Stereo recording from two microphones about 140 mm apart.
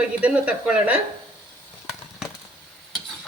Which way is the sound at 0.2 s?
10° right (ahead or behind).